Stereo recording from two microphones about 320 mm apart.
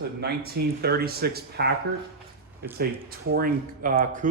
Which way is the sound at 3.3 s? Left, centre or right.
Right.